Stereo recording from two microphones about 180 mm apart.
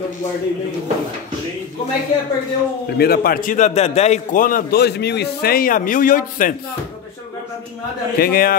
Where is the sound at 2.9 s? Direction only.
60° left (ahead or behind).